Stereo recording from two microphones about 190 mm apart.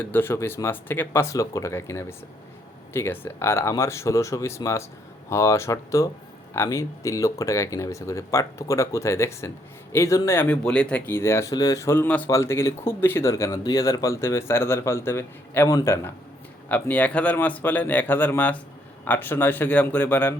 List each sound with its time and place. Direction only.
0.0 s speech: 10° left (ahead or behind)